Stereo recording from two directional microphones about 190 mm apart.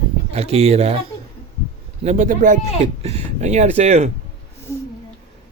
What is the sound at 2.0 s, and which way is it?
Speech, 40° right (ahead or behind).